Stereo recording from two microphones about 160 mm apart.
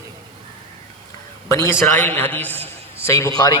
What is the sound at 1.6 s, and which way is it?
A man's voice, 10° left (ahead or behind).